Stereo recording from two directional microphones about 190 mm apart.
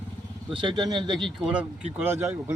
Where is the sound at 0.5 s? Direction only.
25° right (ahead or behind).